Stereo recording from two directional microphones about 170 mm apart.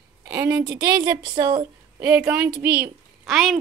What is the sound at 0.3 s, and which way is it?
A woman's voice, 20° right (ahead or behind).